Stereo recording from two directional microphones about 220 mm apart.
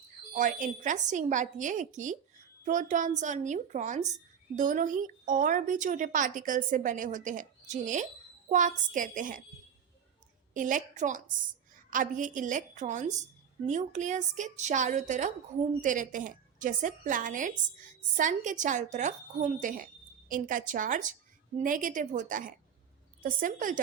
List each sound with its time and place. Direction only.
0.3 s a woman's voice: 35° right (ahead or behind)
10.5 s a woman's voice: 35° right (ahead or behind)